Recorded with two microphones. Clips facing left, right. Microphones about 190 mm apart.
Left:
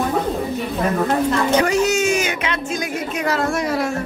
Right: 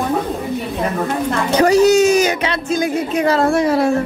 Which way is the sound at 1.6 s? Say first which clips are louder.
Right 11 dB; 35° right (ahead or behind).